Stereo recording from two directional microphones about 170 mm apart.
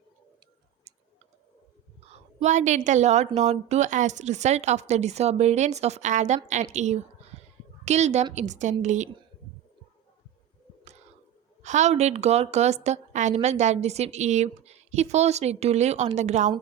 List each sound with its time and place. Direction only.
2.1 s a woman's voice: 45° right (ahead or behind)
11.6 s a woman's voice: 45° right (ahead or behind)